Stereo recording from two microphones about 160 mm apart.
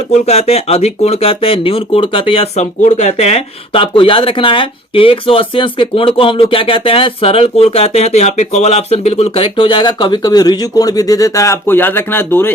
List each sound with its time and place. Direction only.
0.3 s speech: 40° left (ahead or behind); by 12.5 s 15° left (ahead or behind)